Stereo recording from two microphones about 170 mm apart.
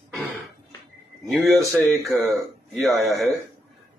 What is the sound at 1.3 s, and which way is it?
Speech, centre (ahead or behind).